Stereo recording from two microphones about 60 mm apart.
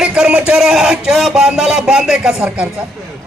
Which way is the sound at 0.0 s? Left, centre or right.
Centre.